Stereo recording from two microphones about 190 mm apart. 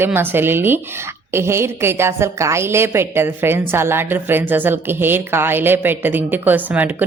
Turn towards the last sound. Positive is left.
turn(degrees=-10)  # may be behind; listen again after turning